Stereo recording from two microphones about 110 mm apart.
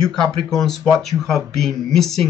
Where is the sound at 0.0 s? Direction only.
5° left (ahead or behind).